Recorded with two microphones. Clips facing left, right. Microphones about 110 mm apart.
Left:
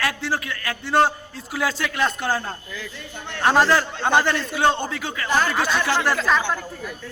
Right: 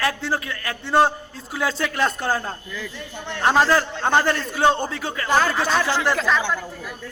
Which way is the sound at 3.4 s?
5° left (ahead or behind).